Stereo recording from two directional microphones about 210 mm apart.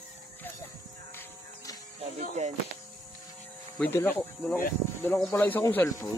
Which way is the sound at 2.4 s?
30° right (ahead or behind).